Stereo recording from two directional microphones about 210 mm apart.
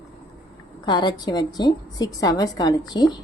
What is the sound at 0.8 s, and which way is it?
Speech, 20° left (ahead or behind).